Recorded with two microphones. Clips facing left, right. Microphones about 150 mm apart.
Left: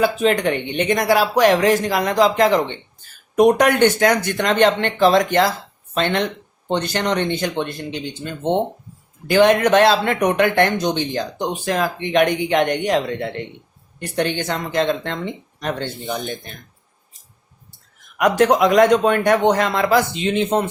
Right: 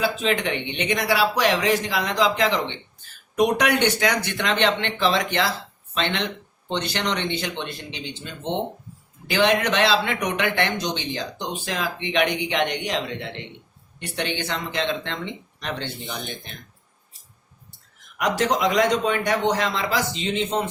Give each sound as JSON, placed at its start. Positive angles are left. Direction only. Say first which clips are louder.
{"t": 0.0, "sound": "a man's voice", "louder": "left 6 dB", "side_deg": 50}
{"t": 18.2, "sound": "speech", "louder": "left 7 dB", "side_deg": 55}